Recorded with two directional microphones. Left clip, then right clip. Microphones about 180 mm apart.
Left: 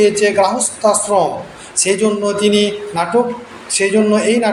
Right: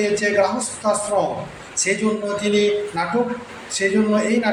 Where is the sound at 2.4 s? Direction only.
20° left (ahead or behind).